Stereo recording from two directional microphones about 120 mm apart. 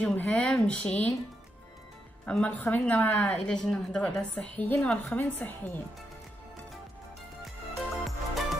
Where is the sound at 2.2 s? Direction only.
10° left (ahead or behind).